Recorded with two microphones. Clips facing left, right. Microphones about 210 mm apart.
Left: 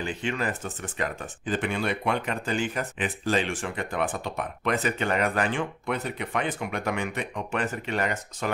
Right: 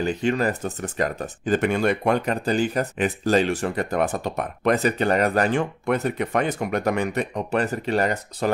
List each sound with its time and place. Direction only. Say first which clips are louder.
0.0 s speech: right 7 dB; 40° right (ahead or behind)